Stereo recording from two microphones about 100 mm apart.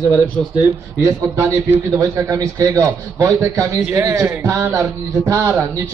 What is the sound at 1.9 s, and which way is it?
A man's voice, 35° right (ahead or behind).